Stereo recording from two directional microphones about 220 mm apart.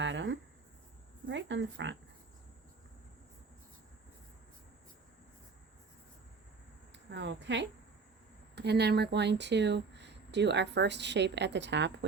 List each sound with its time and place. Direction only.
0.0 s a sound: 55° right (ahead or behind)
1.3 s speech: 55° right (ahead or behind)
7.1 s speech: 55° right (ahead or behind)